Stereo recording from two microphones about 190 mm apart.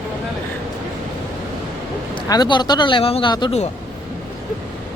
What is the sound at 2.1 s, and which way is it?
A man's voice, 25° left (ahead or behind).